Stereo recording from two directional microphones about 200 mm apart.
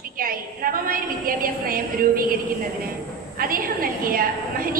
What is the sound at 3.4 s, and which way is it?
A woman's voice, 45° right (ahead or behind).